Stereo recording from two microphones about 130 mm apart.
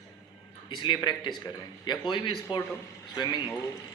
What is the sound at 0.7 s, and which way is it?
A man's voice, 35° left (ahead or behind).